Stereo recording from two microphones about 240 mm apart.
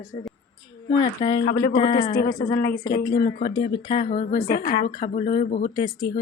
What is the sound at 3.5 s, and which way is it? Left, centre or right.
Speech, left.